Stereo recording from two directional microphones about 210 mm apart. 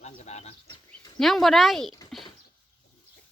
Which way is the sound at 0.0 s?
30° left (ahead or behind).